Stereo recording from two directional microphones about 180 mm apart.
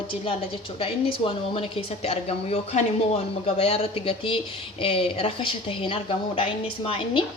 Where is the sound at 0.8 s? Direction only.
30° left (ahead or behind).